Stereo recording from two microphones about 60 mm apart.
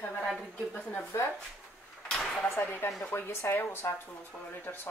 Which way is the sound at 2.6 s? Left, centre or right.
Left.